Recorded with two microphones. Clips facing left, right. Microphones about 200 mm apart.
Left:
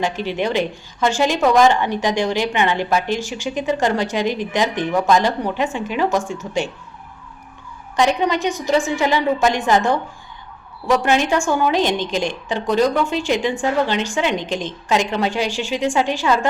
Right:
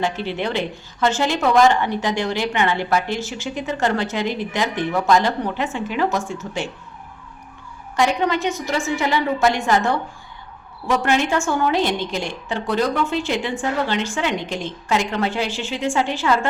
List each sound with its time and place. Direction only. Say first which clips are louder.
0.0 s a woman's voice: left 2 dB; 15° left (ahead or behind)
7.9 s a woman's voice: left 2 dB; 15° left (ahead or behind)